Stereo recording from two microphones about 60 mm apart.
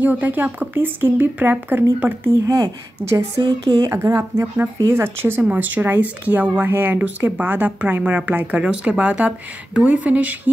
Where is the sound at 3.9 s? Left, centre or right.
Right.